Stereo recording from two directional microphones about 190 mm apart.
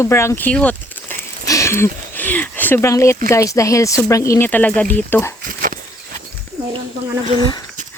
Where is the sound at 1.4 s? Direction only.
15° left (ahead or behind).